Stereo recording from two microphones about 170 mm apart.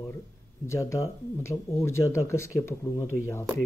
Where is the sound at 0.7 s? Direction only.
15° left (ahead or behind).